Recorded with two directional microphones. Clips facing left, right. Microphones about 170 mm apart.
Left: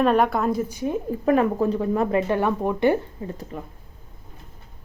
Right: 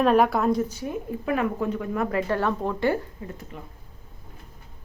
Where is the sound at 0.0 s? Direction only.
Centre (ahead or behind).